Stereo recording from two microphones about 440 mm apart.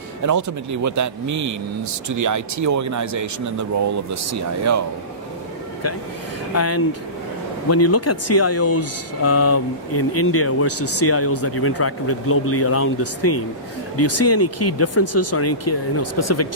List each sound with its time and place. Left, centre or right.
0.2 s speech: right
6.5 s speech: left